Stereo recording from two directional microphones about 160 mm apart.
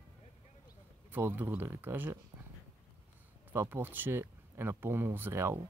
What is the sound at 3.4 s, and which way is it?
Speech, 15° right (ahead or behind).